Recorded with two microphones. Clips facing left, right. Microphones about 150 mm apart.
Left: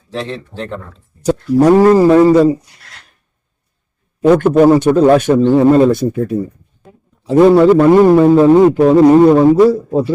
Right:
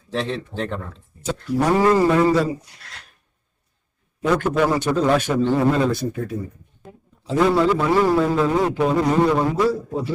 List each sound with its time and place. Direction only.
0.1 s speech: centre (ahead or behind)
1.2 s speech: 45° left (ahead or behind)
4.3 s a man's voice: 45° left (ahead or behind)
5.3 s speech: 30° left (ahead or behind)
5.7 s a man's voice: 50° left (ahead or behind)